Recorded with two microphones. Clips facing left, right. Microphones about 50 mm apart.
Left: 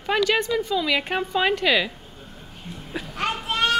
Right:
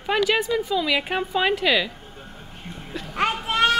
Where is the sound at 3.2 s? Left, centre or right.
Right.